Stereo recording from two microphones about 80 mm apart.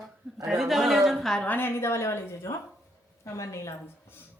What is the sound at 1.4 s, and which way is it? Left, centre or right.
A woman's voice, left.